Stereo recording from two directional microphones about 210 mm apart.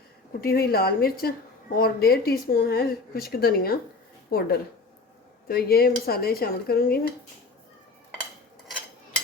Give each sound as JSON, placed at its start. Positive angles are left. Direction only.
{"t": 0.4, "sound": "speech", "side_deg": 45}